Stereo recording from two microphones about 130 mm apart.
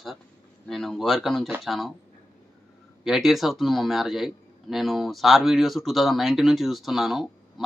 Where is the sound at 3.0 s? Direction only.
Centre (ahead or behind).